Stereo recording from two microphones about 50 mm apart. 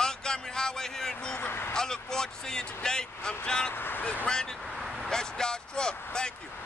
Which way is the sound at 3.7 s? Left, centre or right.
Left.